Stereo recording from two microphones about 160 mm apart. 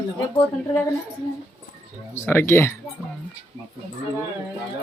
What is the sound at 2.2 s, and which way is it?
Speech, 15° left (ahead or behind).